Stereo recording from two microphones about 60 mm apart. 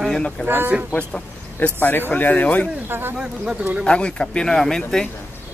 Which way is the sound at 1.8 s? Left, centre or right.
Left.